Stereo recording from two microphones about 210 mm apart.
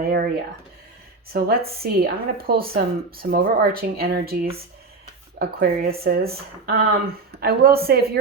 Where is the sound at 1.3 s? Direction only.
45° right (ahead or behind).